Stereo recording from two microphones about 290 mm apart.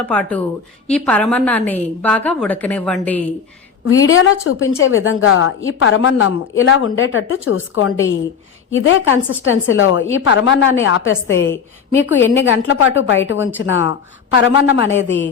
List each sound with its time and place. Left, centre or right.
0.0 s a woman's voice: centre
3.8 s a woman's voice: left